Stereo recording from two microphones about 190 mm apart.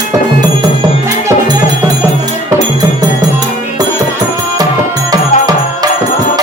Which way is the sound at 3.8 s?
20° right (ahead or behind).